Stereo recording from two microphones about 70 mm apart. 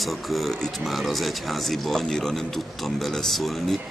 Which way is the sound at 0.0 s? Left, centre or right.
Centre.